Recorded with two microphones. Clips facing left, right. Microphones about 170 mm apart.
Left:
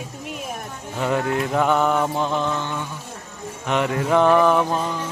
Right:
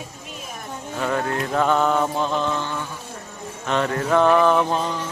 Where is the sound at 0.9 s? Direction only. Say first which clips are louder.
Left 2 dB; 15° left (ahead or behind).